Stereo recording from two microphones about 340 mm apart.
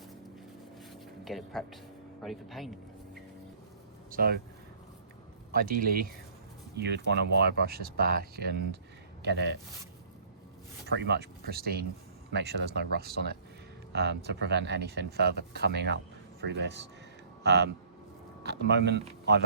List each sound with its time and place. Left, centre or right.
1.2 s speech: centre
4.1 s speech: right
5.5 s speech: right
10.8 s speech: right